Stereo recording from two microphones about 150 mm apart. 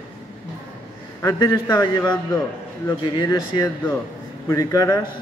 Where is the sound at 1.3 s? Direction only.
30° left (ahead or behind).